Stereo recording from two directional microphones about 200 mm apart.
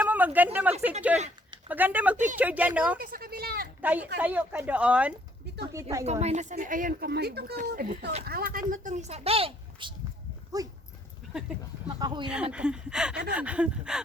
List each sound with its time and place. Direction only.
0.0 s speech: 10° right (ahead or behind)
3.0 s a sound: 50° right (ahead or behind)
3.8 s speech: 10° right (ahead or behind)
6.1 s speech: 35° right (ahead or behind); by 8.6 s 50° right (ahead or behind)
8.7 s a child's voice: 40° right (ahead or behind)
10.5 s speech: 20° right (ahead or behind)
11.9 s speech: 20° right (ahead or behind)
12.2 s speech: 5° right (ahead or behind)